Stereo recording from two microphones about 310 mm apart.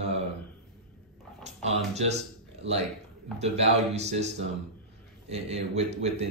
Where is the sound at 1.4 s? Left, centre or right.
Right.